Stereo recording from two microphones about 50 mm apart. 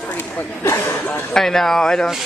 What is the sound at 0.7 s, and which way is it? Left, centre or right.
Speech, left.